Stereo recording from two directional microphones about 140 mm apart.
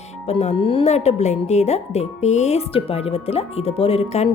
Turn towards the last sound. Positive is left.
turn(degrees=45)  # may be behind; listen again after turning